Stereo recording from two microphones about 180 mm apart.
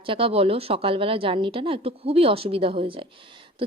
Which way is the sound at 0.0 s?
30° right (ahead or behind).